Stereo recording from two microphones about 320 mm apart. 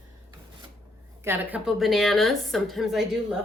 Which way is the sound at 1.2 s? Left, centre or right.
Centre.